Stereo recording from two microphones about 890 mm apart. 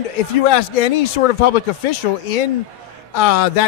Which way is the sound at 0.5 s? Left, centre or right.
Left.